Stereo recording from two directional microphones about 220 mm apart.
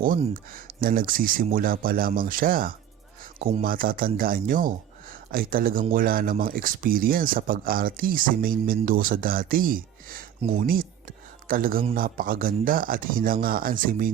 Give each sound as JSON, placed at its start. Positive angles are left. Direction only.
{"t": 0.0, "sound": "speech", "side_deg": -40}
{"t": 11.4, "sound": "speech", "side_deg": -40}